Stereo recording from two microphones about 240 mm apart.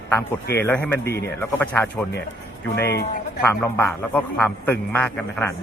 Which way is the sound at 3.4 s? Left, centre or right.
Centre.